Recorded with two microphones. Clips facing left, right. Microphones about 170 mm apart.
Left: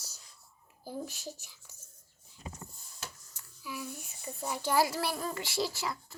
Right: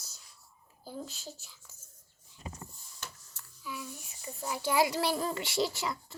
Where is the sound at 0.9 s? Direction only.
10° left (ahead or behind).